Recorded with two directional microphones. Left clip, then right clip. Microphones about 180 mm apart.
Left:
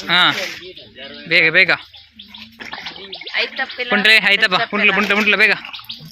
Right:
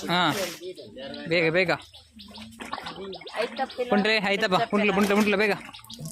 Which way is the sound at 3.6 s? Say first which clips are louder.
Left 6 dB; 15° left (ahead or behind).